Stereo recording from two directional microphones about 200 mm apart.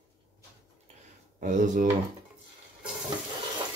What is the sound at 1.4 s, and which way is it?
Speech, 40° right (ahead or behind).